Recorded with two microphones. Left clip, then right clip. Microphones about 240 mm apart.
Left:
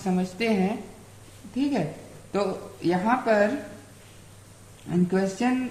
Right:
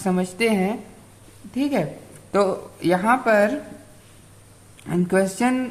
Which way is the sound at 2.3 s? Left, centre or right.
Right.